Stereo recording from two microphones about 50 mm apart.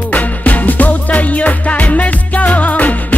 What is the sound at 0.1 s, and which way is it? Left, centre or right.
Music, left.